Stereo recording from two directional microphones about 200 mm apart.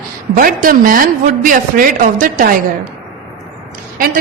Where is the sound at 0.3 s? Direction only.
45° right (ahead or behind).